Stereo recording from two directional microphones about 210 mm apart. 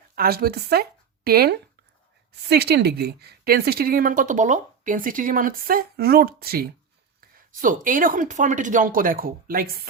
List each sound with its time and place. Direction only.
0.2 s a woman's voice: 45° right (ahead or behind)